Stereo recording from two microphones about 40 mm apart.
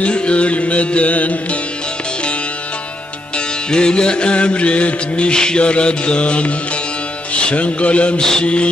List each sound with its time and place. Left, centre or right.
0.0 s music: left
3.3 s music: left
8.2 s mantra: centre